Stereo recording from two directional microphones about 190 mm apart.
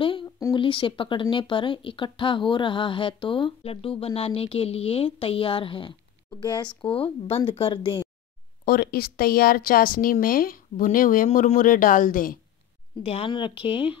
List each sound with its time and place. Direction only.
0.0 s a sound: 25° left (ahead or behind)
0.5 s speech: 25° left (ahead or behind)
8.6 s speech: 50° left (ahead or behind)
13.0 s speech: 30° left (ahead or behind)